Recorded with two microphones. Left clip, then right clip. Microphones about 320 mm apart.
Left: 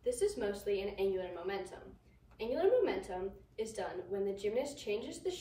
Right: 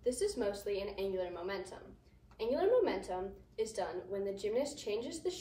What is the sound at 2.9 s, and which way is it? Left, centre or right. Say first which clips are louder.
A woman's voice: right 1 dB; centre.